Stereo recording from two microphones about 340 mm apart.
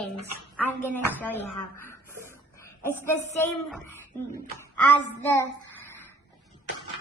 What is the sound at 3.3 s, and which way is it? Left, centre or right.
Speech, centre.